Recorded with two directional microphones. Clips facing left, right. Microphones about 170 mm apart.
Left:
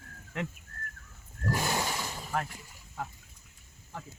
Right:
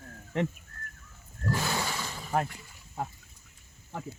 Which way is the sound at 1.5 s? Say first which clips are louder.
Even; 15° left (ahead or behind).